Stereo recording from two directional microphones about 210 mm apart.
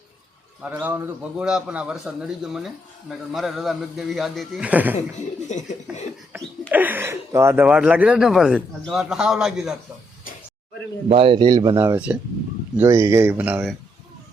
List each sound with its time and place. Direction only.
0.6 s a man's voice: 5° right (ahead or behind)
5.5 s a sound: 35° left (ahead or behind)
6.3 s a man's voice: 10° right (ahead or behind)
11.1 s speech: 25° right (ahead or behind); by 13.7 s 5° right (ahead or behind)